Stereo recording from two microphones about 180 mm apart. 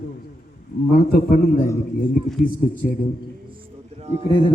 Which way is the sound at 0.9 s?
55° left (ahead or behind).